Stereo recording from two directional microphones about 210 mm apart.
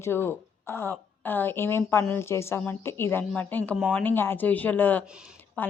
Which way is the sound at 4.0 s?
10° left (ahead or behind).